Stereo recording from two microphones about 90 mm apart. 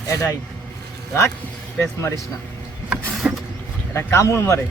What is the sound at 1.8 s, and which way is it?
Speech, 35° left (ahead or behind).